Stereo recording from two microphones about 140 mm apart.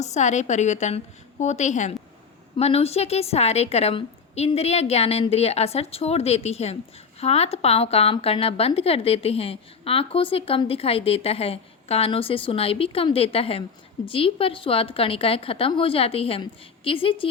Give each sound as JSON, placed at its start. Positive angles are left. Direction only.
{"t": 0.0, "sound": "a woman's voice", "side_deg": 55}
{"t": 2.6, "sound": "a woman's voice", "side_deg": 45}